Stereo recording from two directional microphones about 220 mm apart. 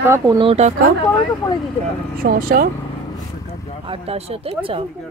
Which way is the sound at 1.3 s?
15° left (ahead or behind).